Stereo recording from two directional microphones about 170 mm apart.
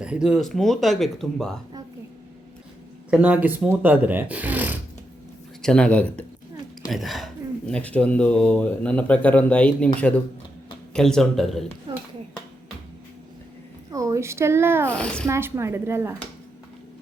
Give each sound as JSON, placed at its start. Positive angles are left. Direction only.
{"t": 0.0, "sound": "speech", "side_deg": -5}
{"t": 3.1, "sound": "speech", "side_deg": -10}
{"t": 5.6, "sound": "speech", "side_deg": 5}
{"t": 11.9, "sound": "a sound", "side_deg": -30}
{"t": 13.9, "sound": "speech", "side_deg": -20}
{"t": 14.8, "sound": "speech", "side_deg": 5}
{"t": 15.3, "sound": "speech", "side_deg": -15}